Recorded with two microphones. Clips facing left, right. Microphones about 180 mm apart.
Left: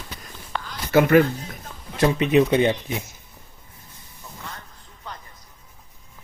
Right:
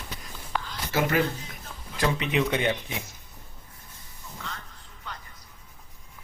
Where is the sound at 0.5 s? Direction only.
10° right (ahead or behind).